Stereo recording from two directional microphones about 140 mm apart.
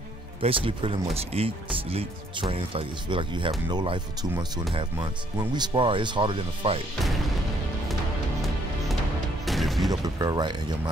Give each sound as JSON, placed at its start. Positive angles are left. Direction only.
{"t": 0.4, "sound": "speech", "side_deg": -40}
{"t": 9.5, "sound": "a sound", "side_deg": 0}
{"t": 10.0, "sound": "speech", "side_deg": -25}